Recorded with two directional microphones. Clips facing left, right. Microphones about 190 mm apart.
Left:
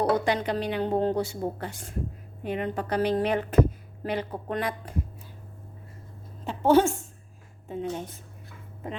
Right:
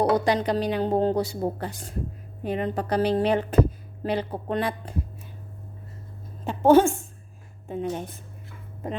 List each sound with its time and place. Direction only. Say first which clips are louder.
0.0 s speech: right 3 dB; 35° right (ahead or behind)
6.4 s a woman's voice: right 3 dB; 50° right (ahead or behind)